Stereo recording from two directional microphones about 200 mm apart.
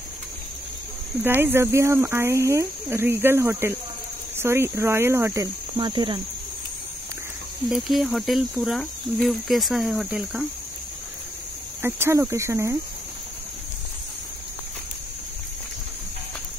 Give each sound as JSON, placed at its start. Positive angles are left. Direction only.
{"t": 1.2, "sound": "speech", "side_deg": -10}
{"t": 7.7, "sound": "speech", "side_deg": 0}
{"t": 11.8, "sound": "speech", "side_deg": -15}